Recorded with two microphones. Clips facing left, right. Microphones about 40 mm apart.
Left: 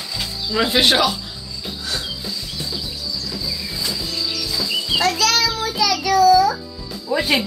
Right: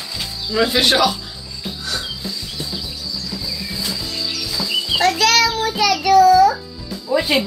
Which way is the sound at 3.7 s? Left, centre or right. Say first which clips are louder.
Right 1 dB; centre.